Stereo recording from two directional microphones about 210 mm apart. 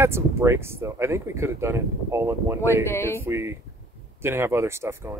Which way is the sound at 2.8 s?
10° left (ahead or behind).